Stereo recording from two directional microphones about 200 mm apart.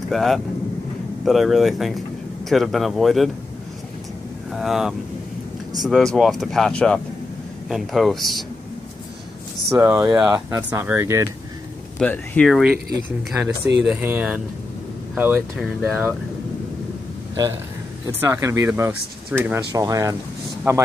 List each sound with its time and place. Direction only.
0.1 s speech: centre (ahead or behind)
4.5 s speech: centre (ahead or behind)
9.7 s speech: 10° right (ahead or behind)
12.0 s speech: 5° left (ahead or behind)
13.8 s speech: 10° right (ahead or behind)
18.2 s speech: 15° right (ahead or behind)